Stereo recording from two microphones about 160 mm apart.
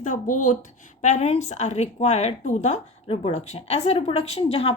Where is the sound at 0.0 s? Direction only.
50° left (ahead or behind).